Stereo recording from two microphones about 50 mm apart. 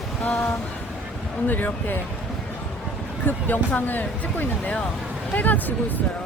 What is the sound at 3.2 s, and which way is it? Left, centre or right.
Speech, left.